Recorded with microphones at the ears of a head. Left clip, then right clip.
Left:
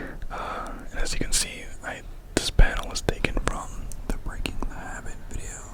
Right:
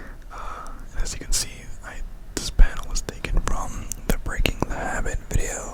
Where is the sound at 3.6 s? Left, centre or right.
Right.